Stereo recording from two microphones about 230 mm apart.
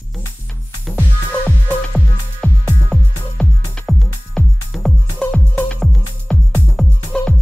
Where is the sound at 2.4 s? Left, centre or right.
Centre.